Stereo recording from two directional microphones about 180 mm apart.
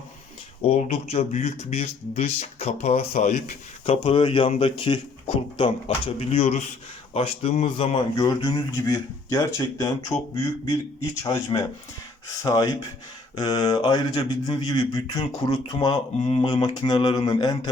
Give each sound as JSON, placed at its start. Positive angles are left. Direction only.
{"t": 0.6, "sound": "speech", "side_deg": 35}
{"t": 8.1, "sound": "speech", "side_deg": 25}